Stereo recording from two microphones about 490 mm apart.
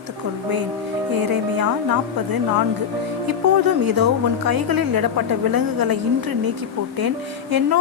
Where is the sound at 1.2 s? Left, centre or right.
Right.